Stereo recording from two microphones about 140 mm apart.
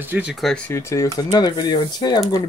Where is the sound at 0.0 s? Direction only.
10° right (ahead or behind).